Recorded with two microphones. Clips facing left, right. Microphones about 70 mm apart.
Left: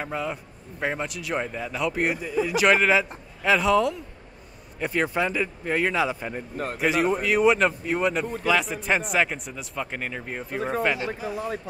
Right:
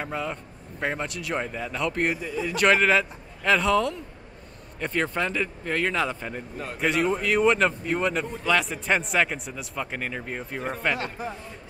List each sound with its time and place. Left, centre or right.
0.0 s a man's voice: centre
6.5 s a man's voice: left
6.8 s a man's voice: centre
11.3 s speech: left